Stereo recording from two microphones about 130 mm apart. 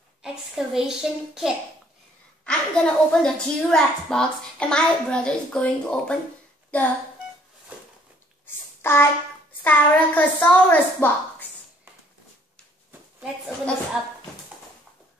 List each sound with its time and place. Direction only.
0.2 s a child's voice: 5° right (ahead or behind)
2.4 s a woman's voice: 10° left (ahead or behind)
8.5 s a sound: 15° left (ahead or behind)
9.6 s a woman's voice: 15° left (ahead or behind)